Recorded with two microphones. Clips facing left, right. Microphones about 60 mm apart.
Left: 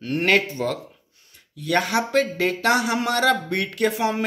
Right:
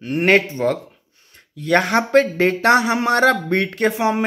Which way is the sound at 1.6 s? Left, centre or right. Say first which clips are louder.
Right 5 dB; right.